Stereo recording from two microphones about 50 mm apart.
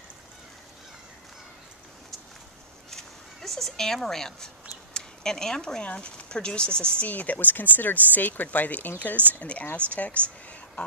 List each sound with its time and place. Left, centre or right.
2.9 s fowl: centre
4.9 s a sound: centre
5.8 s speech: left
7.1 s speech: left